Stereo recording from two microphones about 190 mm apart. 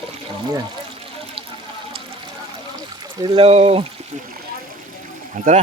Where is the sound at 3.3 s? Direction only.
30° right (ahead or behind).